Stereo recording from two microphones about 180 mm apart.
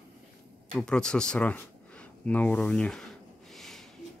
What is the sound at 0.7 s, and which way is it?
Speech, 5° left (ahead or behind).